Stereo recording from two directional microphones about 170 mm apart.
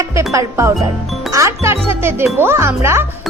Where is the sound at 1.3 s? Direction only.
20° right (ahead or behind).